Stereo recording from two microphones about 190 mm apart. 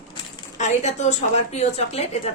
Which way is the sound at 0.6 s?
35° left (ahead or behind).